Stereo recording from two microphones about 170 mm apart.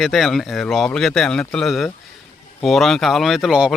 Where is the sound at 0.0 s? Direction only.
Centre (ahead or behind).